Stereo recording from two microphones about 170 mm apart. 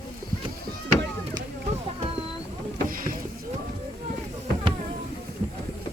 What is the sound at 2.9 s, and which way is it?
Rowboat, 55° right (ahead or behind).